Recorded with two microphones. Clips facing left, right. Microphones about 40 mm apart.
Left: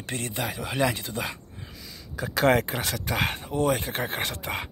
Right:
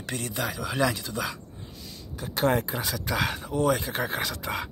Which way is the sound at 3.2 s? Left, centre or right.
Left.